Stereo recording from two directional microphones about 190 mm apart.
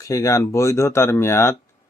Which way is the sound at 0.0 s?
15° left (ahead or behind).